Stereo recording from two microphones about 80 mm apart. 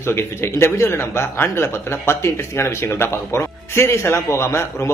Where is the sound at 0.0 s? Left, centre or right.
Left.